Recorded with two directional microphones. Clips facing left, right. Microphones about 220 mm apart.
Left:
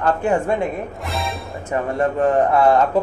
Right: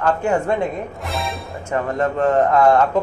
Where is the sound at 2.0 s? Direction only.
15° left (ahead or behind).